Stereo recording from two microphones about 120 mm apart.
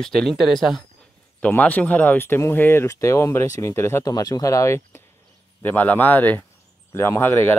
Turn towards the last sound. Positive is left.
turn(degrees=20)  # may be behind; listen again after turning